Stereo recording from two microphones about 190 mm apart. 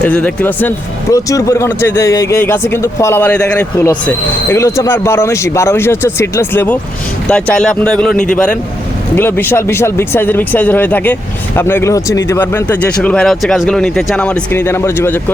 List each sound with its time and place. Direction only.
0.0 s speech: 5° left (ahead or behind)
8.1 s a man's voice: 45° left (ahead or behind)
9.1 s speech: 10° left (ahead or behind)